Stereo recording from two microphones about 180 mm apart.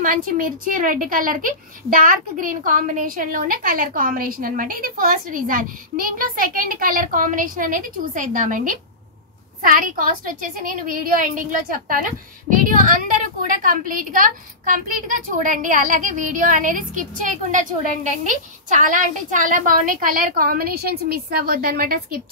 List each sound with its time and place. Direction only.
0.0 s a woman's voice: 50° right (ahead or behind)